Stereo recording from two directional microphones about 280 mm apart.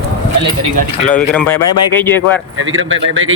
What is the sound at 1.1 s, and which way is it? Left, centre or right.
Speech, centre.